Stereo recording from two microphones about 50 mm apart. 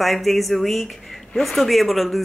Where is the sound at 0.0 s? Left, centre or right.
Centre.